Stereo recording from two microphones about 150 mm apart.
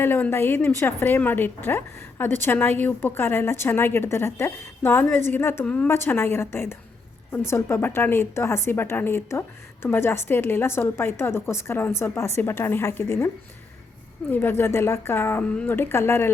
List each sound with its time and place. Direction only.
0.0 s a woman's voice: 15° left (ahead or behind)